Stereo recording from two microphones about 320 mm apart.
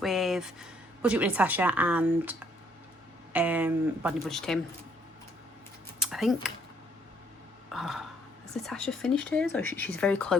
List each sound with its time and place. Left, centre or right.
0.0 s speech: centre
6.0 s a sound: centre
7.7 s speech: centre